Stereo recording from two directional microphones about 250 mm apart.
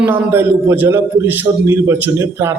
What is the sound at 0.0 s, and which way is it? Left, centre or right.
A man's voice, centre.